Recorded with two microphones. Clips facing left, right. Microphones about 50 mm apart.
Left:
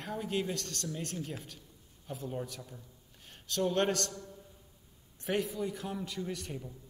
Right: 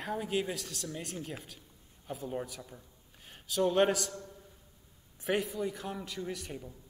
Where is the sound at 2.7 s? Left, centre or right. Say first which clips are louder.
Even; centre.